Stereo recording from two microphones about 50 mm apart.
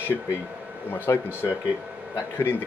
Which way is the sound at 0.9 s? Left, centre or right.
Left.